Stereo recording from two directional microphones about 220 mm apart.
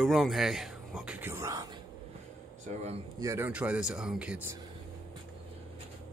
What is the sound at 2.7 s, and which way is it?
Speech, 30° right (ahead or behind).